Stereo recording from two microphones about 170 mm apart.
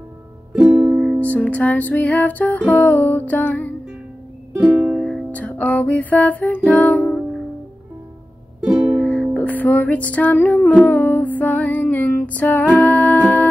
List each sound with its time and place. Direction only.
0.6 s music: 15° right (ahead or behind)
0.9 s music: centre (ahead or behind)
4.6 s music: 15° right (ahead or behind)
5.0 s music: 5° left (ahead or behind)
8.6 s music: 15° right (ahead or behind)
9.0 s music: 5° left (ahead or behind)